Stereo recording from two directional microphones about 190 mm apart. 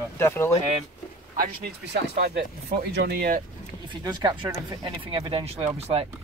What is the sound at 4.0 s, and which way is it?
Speech, 20° right (ahead or behind).